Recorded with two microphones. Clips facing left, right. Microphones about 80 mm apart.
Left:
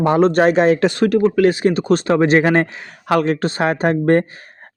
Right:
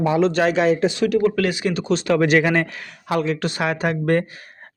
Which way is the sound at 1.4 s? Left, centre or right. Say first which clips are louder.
Left 7 dB; left.